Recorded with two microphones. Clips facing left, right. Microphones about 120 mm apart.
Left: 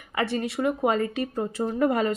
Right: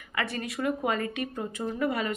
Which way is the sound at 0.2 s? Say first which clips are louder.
Left 5 dB; 30° left (ahead or behind).